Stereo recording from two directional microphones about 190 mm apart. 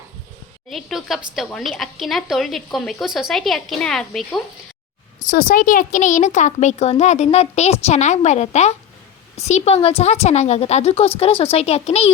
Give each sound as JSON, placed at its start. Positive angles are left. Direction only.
{"t": 0.7, "sound": "speech", "side_deg": 0}
{"t": 5.2, "sound": "speech", "side_deg": 45}